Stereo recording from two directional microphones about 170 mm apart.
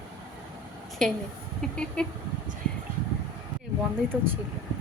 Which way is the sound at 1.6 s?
5° left (ahead or behind).